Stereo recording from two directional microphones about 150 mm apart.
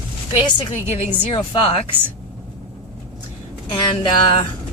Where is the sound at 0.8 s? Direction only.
45° left (ahead or behind).